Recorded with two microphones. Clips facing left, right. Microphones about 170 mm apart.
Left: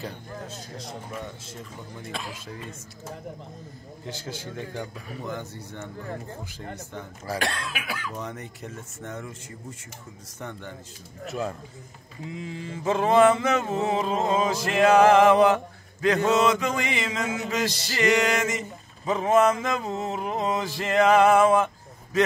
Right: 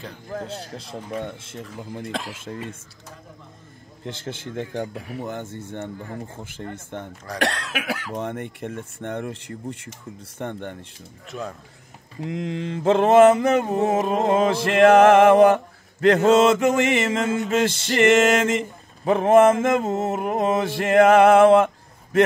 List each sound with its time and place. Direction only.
0.3 s speech: 70° right (ahead or behind)
1.6 s mantra: 65° right (ahead or behind)
4.0 s a man's voice: 60° right (ahead or behind)
7.3 s mantra: 75° right (ahead or behind); by 10.8 s 60° right (ahead or behind)
11.2 s speech: centre (ahead or behind)
12.2 s mantra: 75° right (ahead or behind); by 16.2 s 55° right (ahead or behind)
16.4 s a man's voice: 50° right (ahead or behind)
17.6 s mantra: 55° right (ahead or behind)